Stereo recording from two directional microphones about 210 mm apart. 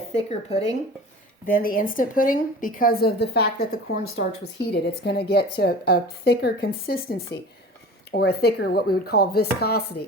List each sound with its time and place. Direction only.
0.1 s speech: 30° left (ahead or behind)
1.5 s speech: 40° left (ahead or behind)